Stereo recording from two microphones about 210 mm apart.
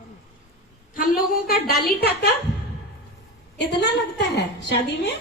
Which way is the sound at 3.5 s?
55° left (ahead or behind).